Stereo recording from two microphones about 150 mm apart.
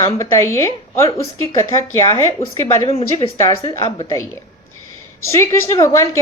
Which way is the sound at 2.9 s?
40° left (ahead or behind).